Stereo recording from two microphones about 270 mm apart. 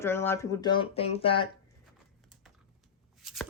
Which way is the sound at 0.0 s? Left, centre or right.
Centre.